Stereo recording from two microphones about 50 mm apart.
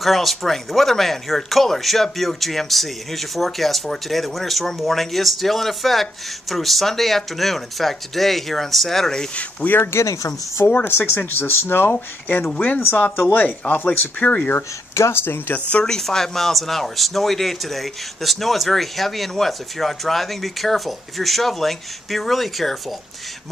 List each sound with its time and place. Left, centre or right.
0.0 s speech: centre
9.3 s speech: left
9.9 s speech: left
10.9 s speech: left
15.0 s speech: left
15.2 s speech: left
15.8 s speech: centre